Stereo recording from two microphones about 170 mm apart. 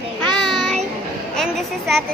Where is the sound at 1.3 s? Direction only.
Centre (ahead or behind).